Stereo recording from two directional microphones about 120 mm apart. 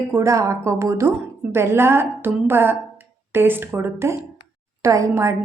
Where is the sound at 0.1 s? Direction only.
25° right (ahead or behind).